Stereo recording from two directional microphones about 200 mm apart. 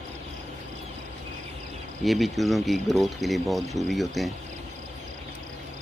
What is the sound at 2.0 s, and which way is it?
Speech, centre (ahead or behind).